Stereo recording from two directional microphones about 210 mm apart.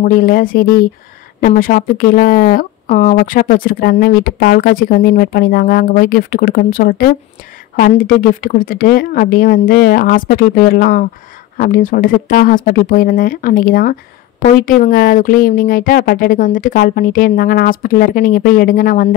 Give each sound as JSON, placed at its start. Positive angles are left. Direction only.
{"t": 0.0, "sound": "speech", "side_deg": 45}